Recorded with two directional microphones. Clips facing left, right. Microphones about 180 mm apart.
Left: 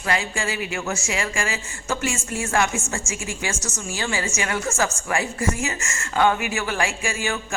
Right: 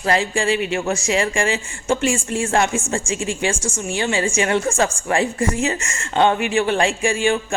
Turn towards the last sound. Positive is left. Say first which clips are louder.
# right 8 dB
turn(degrees=-30)  # may be behind; listen again after turning